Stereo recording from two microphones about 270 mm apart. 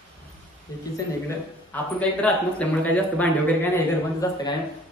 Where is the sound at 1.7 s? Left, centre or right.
Centre.